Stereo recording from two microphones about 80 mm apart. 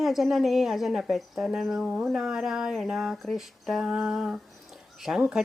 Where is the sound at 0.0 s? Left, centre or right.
Centre.